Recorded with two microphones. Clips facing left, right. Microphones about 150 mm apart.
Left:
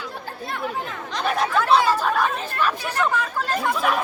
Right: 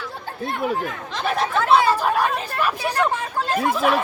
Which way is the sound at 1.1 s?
Centre (ahead or behind).